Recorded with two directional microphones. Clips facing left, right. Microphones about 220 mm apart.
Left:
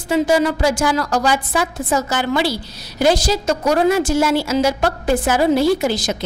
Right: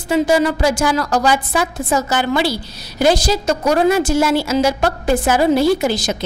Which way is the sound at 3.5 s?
20° right (ahead or behind).